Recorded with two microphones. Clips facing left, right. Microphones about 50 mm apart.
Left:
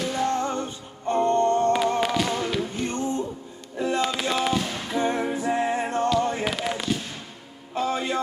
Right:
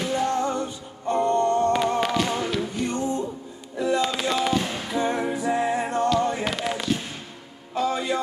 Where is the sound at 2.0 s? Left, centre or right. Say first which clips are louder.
Even; centre.